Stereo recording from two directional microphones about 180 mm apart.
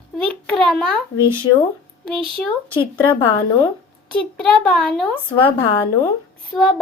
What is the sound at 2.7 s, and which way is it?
Speech, 30° left (ahead or behind).